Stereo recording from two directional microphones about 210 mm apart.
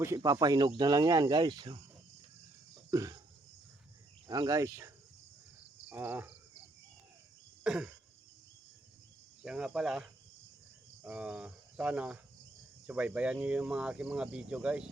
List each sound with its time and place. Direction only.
0.0 s speech: 15° right (ahead or behind)
2.9 s a sound: 15° right (ahead or behind)
4.3 s speech: 15° right (ahead or behind)
5.9 s speech: 10° right (ahead or behind)
7.6 s a sound: 5° right (ahead or behind)
9.4 s speech: 5° right (ahead or behind)
11.0 s cricket: 5° right (ahead or behind)
12.9 s speech: 5° right (ahead or behind)